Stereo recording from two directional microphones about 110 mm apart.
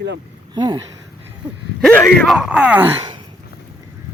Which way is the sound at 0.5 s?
40° right (ahead or behind).